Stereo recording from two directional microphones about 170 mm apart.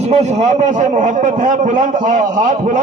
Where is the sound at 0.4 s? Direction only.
45° right (ahead or behind).